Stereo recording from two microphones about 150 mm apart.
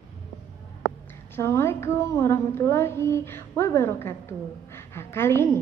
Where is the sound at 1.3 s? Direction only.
15° left (ahead or behind).